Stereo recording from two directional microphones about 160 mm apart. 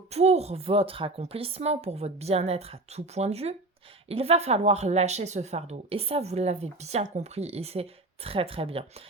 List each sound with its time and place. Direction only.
0.1 s speech: 40° right (ahead or behind)